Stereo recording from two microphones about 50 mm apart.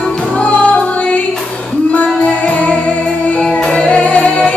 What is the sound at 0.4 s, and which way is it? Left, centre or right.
Music, left.